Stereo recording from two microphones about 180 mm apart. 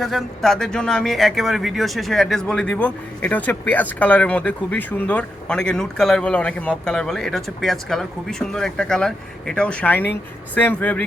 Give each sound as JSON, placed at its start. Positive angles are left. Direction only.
{"t": 0.0, "sound": "speech", "side_deg": 0}